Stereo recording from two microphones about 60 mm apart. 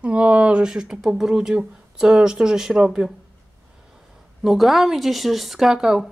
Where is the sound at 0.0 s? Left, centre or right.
Centre.